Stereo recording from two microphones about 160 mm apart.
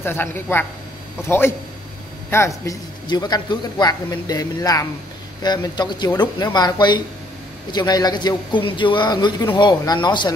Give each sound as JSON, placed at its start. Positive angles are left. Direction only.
{"t": 0.0, "sound": "a woman's voice", "side_deg": 15}